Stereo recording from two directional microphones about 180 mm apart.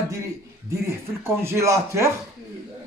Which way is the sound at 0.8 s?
15° right (ahead or behind).